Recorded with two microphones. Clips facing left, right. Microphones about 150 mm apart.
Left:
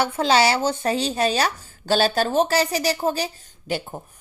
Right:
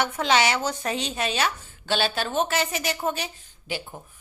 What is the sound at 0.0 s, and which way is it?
Speech, 30° left (ahead or behind).